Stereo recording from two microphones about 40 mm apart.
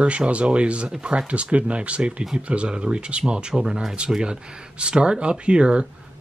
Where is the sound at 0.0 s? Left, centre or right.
Right.